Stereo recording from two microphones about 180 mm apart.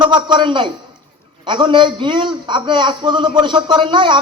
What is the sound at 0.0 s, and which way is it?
A man's voice, 25° right (ahead or behind).